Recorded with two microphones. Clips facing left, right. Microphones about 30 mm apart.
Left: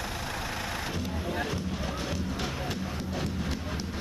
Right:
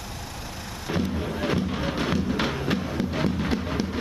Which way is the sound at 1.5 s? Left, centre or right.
Right.